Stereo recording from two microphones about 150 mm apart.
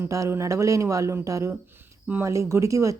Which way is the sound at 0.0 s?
20° right (ahead or behind).